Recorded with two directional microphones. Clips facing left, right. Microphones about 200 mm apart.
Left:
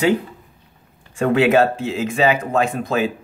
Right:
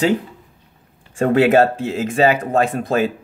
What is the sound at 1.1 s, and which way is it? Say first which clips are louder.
Speech: right 2 dB; 50° right (ahead or behind).